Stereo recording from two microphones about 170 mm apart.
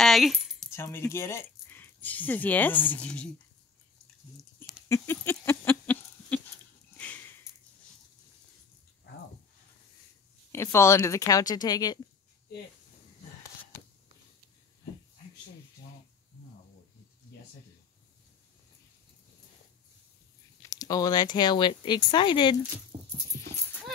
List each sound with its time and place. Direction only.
0.0 s keys jangling: centre (ahead or behind)
0.7 s speech: 15° left (ahead or behind)
4.8 s a sound: 15° left (ahead or behind)
6.9 s sniff: 10° left (ahead or behind)
10.5 s speech: 15° left (ahead or behind)
20.6 s speech: 20° left (ahead or behind)
22.9 s a sound: 35° right (ahead or behind)
23.3 s clip-clop: 20° left (ahead or behind)